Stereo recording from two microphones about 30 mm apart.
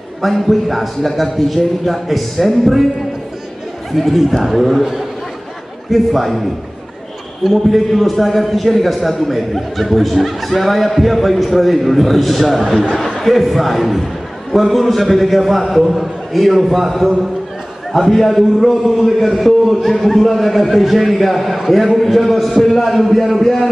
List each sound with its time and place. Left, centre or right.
0.2 s a man's voice: centre
3.9 s a man's voice: centre
5.9 s a man's voice: centre
7.4 s a man's voice: centre
12.9 s a sound: centre
13.2 s a man's voice: centre